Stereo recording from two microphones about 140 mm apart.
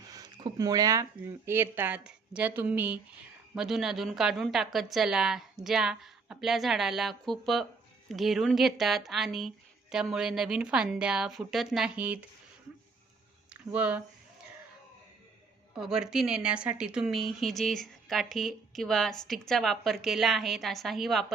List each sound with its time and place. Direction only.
0.0 s a sound: 25° right (ahead or behind)
1.5 s a woman's voice: 15° right (ahead or behind)
13.5 s speech: 10° right (ahead or behind)
15.7 s speech: 5° right (ahead or behind)